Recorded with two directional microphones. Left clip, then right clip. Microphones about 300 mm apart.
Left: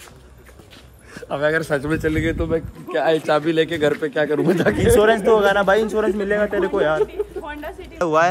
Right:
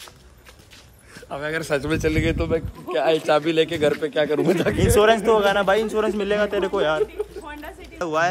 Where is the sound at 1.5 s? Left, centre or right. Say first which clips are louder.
Left 3 dB; centre.